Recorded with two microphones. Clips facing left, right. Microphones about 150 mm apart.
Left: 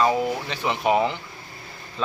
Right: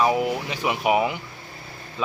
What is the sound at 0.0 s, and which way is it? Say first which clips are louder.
A man's voice: even; 10° right (ahead or behind).